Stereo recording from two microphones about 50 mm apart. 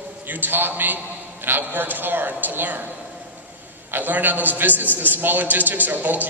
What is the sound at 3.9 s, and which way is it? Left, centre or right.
A man's voice, right.